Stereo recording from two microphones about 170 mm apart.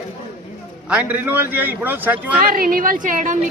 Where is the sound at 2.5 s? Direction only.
55° right (ahead or behind).